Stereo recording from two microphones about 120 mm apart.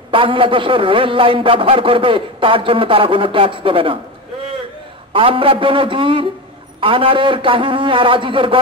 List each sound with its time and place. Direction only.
0.1 s a man's voice: 45° right (ahead or behind)
5.1 s a man's voice: 50° right (ahead or behind)